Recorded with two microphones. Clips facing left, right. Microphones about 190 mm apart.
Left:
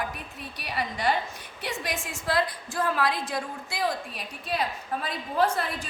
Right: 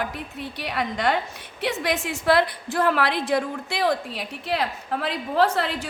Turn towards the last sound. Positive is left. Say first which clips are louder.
# right 4 dB
turn(degrees=-70)  # may be behind; listen again after turning